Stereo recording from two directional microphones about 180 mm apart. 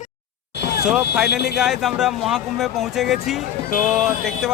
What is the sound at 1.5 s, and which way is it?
Speech, centre (ahead or behind).